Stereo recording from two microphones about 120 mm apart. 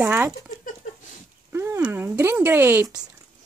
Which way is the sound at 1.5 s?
20° right (ahead or behind).